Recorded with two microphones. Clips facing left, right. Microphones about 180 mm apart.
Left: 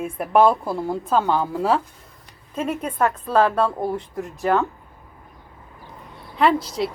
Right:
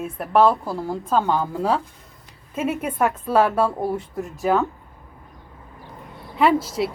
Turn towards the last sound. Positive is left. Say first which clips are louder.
# right 1 dB
turn(degrees=-5)  # may be behind; listen again after turning